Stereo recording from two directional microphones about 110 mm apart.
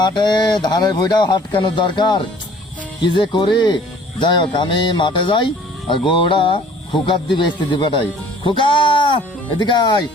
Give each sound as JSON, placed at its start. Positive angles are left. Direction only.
{"t": 0.0, "sound": "speech", "side_deg": 45}